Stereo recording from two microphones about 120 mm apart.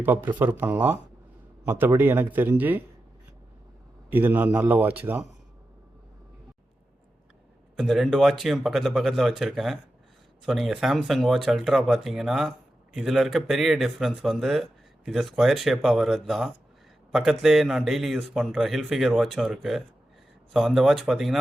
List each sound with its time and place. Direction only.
0.0 s a man's voice: 15° right (ahead or behind)
4.1 s a man's voice: 15° right (ahead or behind)
7.8 s speech: centre (ahead or behind)